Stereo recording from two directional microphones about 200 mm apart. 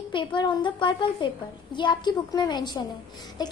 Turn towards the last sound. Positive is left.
turn(degrees=20)  # may be behind; listen again after turning